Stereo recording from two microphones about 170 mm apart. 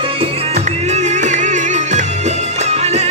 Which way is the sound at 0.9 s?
45° right (ahead or behind).